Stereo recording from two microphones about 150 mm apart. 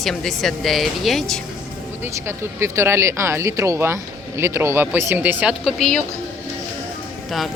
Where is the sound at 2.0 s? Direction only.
15° right (ahead or behind).